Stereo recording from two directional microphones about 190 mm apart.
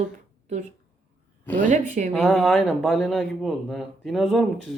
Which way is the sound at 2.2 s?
Centre (ahead or behind).